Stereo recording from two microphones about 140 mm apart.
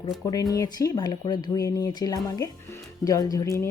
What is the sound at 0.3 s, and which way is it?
Speech, 25° left (ahead or behind).